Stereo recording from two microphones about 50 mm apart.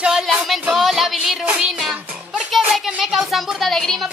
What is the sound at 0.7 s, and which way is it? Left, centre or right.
Music, centre.